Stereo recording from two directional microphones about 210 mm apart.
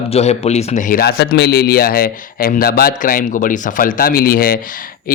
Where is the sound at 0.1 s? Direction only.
30° left (ahead or behind).